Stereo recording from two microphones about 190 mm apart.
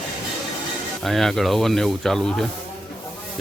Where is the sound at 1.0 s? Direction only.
Centre (ahead or behind).